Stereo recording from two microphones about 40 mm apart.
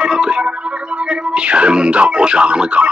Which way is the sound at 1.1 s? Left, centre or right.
Right.